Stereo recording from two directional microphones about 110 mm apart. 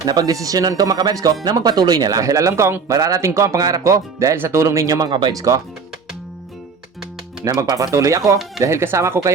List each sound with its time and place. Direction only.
0.0 s speech: 35° right (ahead or behind)
7.4 s speech: 35° right (ahead or behind)